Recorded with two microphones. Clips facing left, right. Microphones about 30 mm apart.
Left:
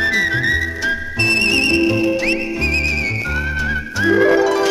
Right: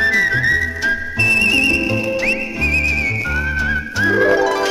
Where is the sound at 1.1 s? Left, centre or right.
Left.